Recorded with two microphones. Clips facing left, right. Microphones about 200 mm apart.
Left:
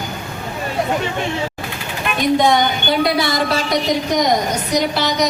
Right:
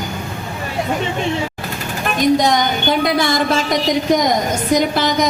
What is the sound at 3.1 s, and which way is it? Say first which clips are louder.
Speech: right 1 dB; 50° right (ahead or behind).